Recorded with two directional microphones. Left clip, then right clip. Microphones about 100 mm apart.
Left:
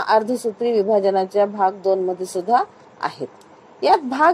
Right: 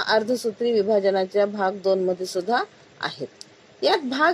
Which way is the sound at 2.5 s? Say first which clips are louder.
Left 9 dB; 10° right (ahead or behind).